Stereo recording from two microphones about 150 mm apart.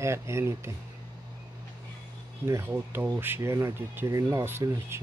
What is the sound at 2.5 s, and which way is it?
Speech, 15° right (ahead or behind).